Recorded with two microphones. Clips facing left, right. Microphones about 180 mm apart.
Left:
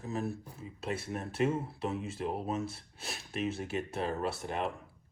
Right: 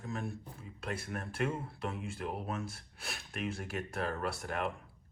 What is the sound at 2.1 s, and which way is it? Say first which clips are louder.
Speech: left 4 dB; 30° left (ahead or behind).